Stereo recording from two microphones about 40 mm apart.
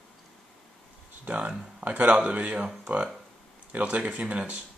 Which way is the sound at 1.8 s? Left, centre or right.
Right.